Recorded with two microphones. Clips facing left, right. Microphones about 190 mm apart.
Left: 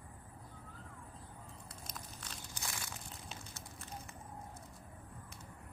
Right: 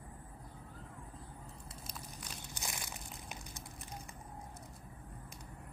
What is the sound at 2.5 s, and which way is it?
Crushing, 20° right (ahead or behind).